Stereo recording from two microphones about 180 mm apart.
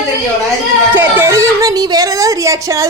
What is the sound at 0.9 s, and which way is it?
Speech, 10° right (ahead or behind).